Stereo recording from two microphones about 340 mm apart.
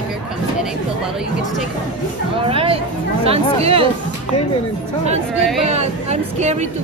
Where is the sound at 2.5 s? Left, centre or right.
Centre.